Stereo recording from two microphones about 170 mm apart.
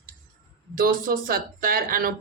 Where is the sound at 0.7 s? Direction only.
55° right (ahead or behind).